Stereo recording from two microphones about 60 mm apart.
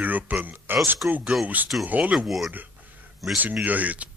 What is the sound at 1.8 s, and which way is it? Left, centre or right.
Speech, right.